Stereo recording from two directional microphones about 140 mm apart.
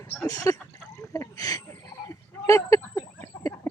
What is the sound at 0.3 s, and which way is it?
Speech, 25° left (ahead or behind).